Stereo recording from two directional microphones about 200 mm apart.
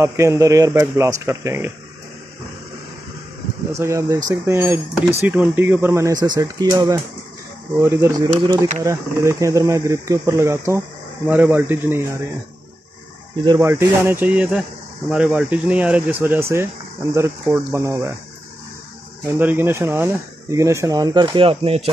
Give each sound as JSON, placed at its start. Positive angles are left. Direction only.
{"t": 0.0, "sound": "speech", "side_deg": -15}
{"t": 3.7, "sound": "speech", "side_deg": -15}
{"t": 13.5, "sound": "speech", "side_deg": -10}
{"t": 19.2, "sound": "speech", "side_deg": -10}